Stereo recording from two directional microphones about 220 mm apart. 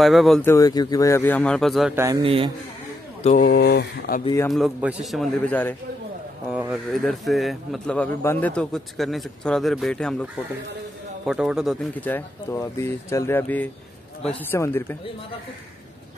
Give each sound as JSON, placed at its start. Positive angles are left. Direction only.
{"t": 0.0, "sound": "a man's voice", "side_deg": 0}
{"t": 0.5, "sound": "speech", "side_deg": 15}
{"t": 2.0, "sound": "a man's voice", "side_deg": -15}
{"t": 3.3, "sound": "speech", "side_deg": 40}
{"t": 4.2, "sound": "speech", "side_deg": 15}
{"t": 4.5, "sound": "a man's voice", "side_deg": 0}
{"t": 6.5, "sound": "a man's voice", "side_deg": -5}